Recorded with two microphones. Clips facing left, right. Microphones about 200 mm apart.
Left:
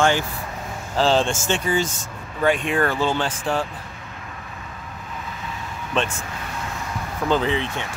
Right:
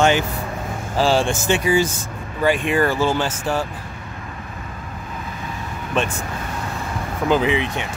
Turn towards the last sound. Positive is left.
turn(degrees=-15)  # may be behind; listen again after turning